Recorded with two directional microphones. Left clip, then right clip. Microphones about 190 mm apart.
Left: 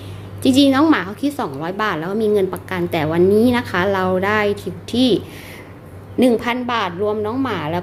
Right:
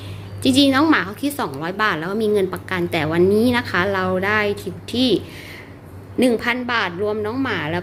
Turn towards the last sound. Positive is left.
turn(degrees=10)  # may be behind; listen again after turning